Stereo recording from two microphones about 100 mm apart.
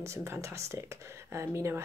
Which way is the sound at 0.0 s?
30° right (ahead or behind).